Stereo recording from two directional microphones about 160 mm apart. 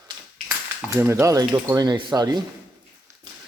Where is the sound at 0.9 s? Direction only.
15° right (ahead or behind).